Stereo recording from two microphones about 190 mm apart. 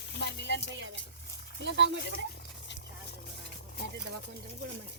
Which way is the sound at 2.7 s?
65° left (ahead or behind).